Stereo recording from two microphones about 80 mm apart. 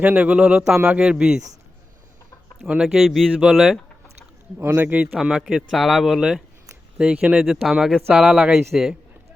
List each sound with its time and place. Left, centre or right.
0.0 s speech: centre
2.6 s speech: centre
4.6 s a man's voice: right
5.2 s speech: centre
7.4 s speech: centre